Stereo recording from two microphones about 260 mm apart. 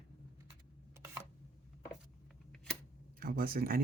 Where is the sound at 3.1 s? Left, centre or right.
Right.